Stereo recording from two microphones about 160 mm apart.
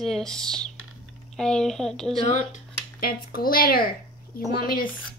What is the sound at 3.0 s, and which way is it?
Speech, 70° left (ahead or behind).